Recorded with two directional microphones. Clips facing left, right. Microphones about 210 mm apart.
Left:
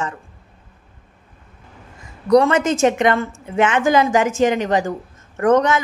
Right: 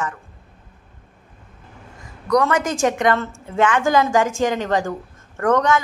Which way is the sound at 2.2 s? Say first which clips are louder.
Left 4 dB; 25° left (ahead or behind).